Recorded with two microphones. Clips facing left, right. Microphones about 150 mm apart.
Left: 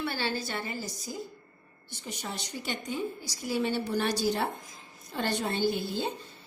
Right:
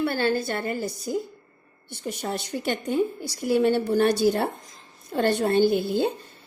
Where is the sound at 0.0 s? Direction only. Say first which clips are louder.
Right 8 dB; 55° right (ahead or behind).